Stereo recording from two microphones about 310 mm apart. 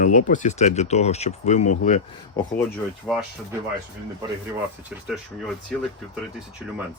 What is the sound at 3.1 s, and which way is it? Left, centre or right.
Speech, centre.